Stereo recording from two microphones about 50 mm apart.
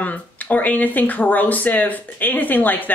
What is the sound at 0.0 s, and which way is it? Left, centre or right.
Speech, left.